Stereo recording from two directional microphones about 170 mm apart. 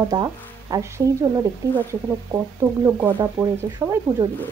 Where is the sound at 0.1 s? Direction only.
20° right (ahead or behind).